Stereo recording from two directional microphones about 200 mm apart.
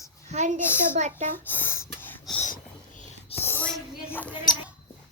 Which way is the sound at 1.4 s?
10° left (ahead or behind).